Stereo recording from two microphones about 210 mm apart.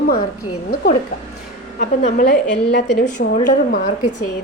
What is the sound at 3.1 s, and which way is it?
Speech, 40° left (ahead or behind).